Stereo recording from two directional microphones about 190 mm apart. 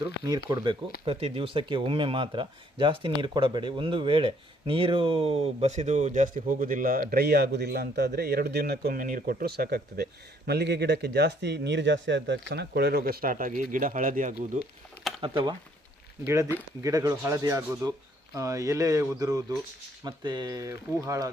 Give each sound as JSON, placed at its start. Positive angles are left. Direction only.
{"t": 0.0, "sound": "speech", "side_deg": -20}
{"t": 15.2, "sound": "speech", "side_deg": -25}
{"t": 16.2, "sound": "speech", "side_deg": -15}